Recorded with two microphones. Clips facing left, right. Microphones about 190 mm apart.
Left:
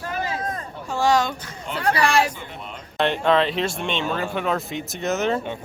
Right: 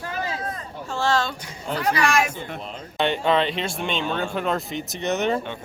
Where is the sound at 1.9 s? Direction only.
30° left (ahead or behind).